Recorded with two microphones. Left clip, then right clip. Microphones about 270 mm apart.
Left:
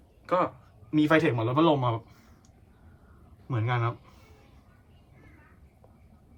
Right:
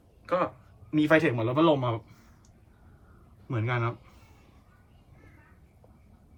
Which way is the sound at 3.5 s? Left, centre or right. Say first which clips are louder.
Even; centre.